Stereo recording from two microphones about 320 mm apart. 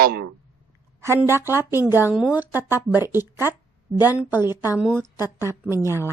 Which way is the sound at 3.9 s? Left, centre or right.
Centre.